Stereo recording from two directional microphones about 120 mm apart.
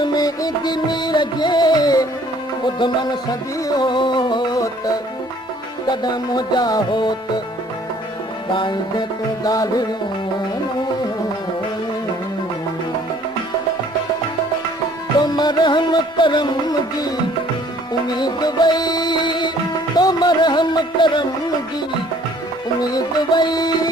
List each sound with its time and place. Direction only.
0.0 s music: 35° left (ahead or behind)
8.5 s music: 40° left (ahead or behind)
15.2 s music: 35° left (ahead or behind)
18.2 s music: 35° left (ahead or behind)
22.8 s music: 35° left (ahead or behind)